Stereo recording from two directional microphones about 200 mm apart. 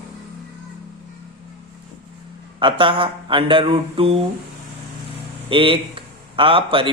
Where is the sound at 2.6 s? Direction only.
25° right (ahead or behind).